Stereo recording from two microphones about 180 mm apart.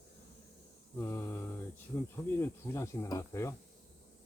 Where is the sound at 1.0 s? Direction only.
15° left (ahead or behind).